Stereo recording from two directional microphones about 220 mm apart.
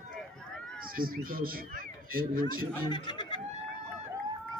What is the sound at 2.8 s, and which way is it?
Speech, 20° left (ahead or behind).